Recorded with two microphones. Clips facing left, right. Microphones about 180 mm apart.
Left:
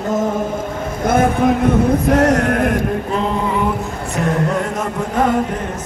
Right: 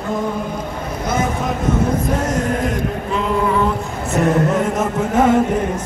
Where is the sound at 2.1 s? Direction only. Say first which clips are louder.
Left 5 dB; 70° left (ahead or behind).